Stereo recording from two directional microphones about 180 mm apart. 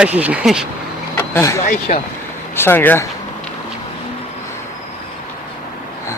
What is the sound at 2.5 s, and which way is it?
Speech, 10° left (ahead or behind).